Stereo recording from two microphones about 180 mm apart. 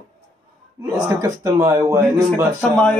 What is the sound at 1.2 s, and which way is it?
Speech, 20° right (ahead or behind).